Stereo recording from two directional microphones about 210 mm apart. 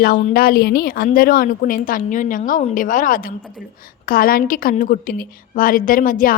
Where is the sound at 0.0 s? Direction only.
45° left (ahead or behind).